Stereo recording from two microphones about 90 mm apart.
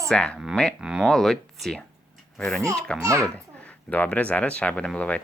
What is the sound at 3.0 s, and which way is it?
Speech, 35° right (ahead or behind).